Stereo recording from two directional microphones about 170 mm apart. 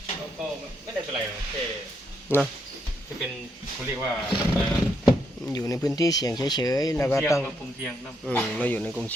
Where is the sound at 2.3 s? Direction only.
15° left (ahead or behind).